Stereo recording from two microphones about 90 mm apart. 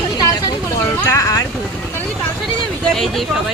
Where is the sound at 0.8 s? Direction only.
30° left (ahead or behind).